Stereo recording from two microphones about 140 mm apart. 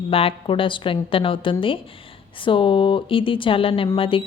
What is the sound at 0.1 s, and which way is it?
A woman's voice, 40° left (ahead or behind).